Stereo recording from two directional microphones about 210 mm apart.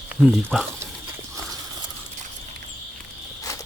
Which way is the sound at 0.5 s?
Centre (ahead or behind).